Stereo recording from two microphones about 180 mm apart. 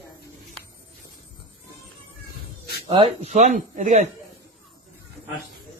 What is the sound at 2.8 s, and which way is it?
Speech, 30° right (ahead or behind).